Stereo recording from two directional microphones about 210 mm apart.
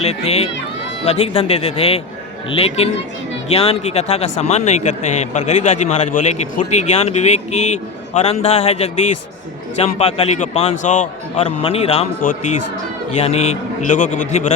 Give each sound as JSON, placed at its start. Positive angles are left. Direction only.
{"t": 0.0, "sound": "a man's voice", "side_deg": 30}
{"t": 13.1, "sound": "a man's voice", "side_deg": 30}